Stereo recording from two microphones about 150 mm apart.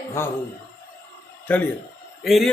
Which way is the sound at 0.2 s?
15° left (ahead or behind).